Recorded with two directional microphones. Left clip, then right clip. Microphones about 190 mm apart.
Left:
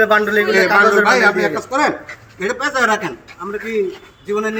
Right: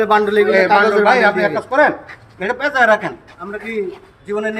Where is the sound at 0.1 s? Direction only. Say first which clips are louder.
Right 1 dB; 75° right (ahead or behind).